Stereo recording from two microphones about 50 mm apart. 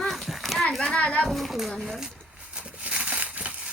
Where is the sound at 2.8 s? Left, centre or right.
Right.